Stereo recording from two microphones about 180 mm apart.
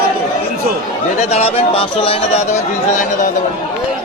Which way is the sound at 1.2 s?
35° left (ahead or behind).